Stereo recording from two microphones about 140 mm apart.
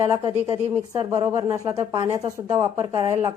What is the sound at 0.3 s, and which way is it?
Speech, 45° right (ahead or behind).